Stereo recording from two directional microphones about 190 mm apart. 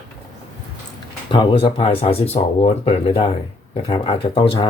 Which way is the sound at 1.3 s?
25° left (ahead or behind).